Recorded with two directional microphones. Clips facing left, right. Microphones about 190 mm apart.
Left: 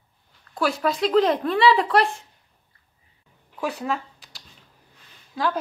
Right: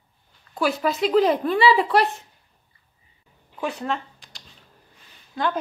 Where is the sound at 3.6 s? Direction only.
5° left (ahead or behind).